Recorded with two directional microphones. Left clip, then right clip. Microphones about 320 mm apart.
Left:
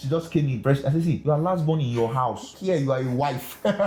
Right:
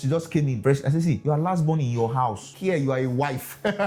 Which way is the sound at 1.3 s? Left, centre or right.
Right.